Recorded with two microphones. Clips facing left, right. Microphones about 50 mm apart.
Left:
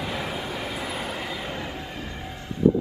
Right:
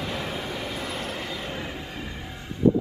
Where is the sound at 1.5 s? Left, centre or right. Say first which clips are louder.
Left 1 dB; centre.